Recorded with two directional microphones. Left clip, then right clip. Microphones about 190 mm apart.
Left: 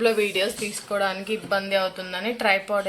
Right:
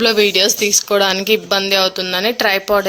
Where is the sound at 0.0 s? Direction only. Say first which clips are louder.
Right 9 dB; 55° right (ahead or behind).